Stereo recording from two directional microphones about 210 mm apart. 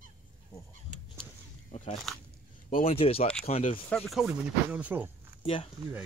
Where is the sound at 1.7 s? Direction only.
30° left (ahead or behind).